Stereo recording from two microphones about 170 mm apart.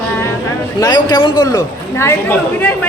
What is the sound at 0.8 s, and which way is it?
A man's voice, 25° left (ahead or behind).